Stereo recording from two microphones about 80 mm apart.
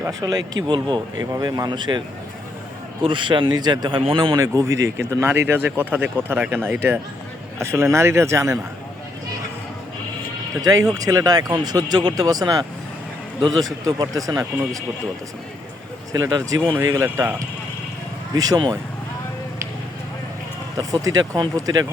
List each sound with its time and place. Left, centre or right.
0.1 s speech: right
0.7 s speech: right
1.2 s speech: right
3.0 s speech: right
4.4 s speech: right
5.2 s speech: right
7.6 s speech: right
10.6 s speech: right
13.8 s speech: right
16.3 s speech: right
16.8 s speech: right
18.3 s speech: right
20.7 s speech: right